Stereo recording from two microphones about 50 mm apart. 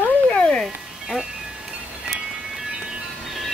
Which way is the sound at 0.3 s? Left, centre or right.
Left.